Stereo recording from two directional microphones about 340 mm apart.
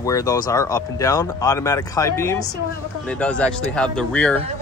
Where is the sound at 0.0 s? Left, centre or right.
Centre.